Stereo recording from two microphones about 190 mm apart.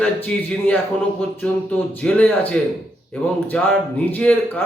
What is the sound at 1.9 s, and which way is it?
Speech, 5° left (ahead or behind).